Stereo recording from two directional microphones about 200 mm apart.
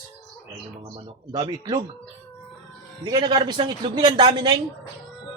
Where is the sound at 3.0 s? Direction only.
20° right (ahead or behind).